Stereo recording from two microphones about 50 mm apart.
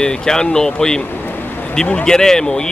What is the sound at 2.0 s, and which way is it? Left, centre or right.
Speech, centre.